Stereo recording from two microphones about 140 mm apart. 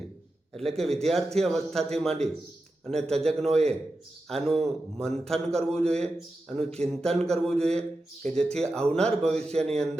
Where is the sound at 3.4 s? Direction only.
50° right (ahead or behind).